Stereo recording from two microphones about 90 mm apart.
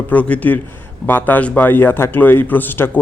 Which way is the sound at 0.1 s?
15° left (ahead or behind).